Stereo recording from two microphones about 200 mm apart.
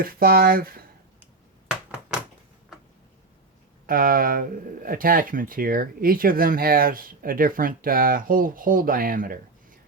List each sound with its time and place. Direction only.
0.0 s speech: 45° right (ahead or behind)
3.8 s speech: 45° right (ahead or behind)